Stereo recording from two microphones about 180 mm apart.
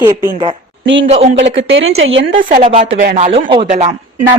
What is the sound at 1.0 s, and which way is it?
Speech, 35° right (ahead or behind).